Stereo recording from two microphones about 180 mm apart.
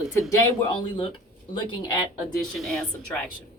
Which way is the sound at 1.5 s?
25° left (ahead or behind).